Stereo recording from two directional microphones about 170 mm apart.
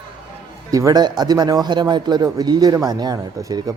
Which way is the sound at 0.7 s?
20° right (ahead or behind).